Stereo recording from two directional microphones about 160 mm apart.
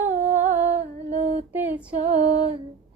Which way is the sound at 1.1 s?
40° right (ahead or behind).